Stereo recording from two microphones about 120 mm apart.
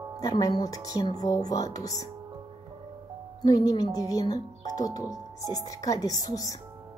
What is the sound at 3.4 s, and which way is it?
Speech, 30° left (ahead or behind).